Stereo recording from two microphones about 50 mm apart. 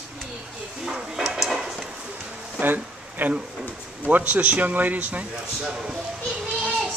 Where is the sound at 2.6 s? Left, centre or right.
Right.